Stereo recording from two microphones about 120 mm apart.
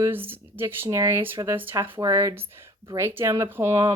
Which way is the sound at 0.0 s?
15° right (ahead or behind).